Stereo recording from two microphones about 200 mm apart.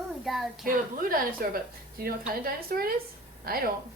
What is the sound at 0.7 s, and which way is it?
Speech, 45° right (ahead or behind).